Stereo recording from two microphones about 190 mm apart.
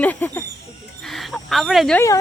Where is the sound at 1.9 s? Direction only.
15° left (ahead or behind).